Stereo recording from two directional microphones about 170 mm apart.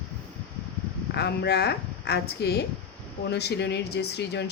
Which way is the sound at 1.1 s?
75° left (ahead or behind).